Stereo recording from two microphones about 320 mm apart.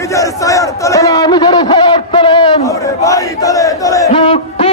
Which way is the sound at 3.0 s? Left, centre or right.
Centre.